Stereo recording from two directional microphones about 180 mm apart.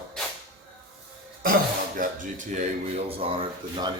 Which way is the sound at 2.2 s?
45° right (ahead or behind).